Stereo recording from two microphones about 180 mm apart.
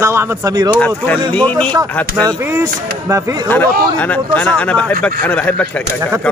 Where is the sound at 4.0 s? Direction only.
10° left (ahead or behind).